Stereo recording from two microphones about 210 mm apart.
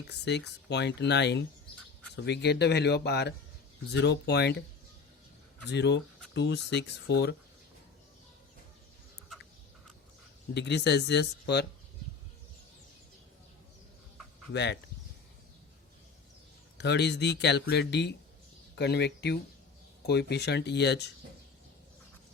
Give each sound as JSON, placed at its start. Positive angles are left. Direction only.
{"t": 0.1, "sound": "speech", "side_deg": 55}
{"t": 5.6, "sound": "speech", "side_deg": 55}
{"t": 10.5, "sound": "speech", "side_deg": 55}
{"t": 14.5, "sound": "speech", "side_deg": 55}
{"t": 16.7, "sound": "speech", "side_deg": 55}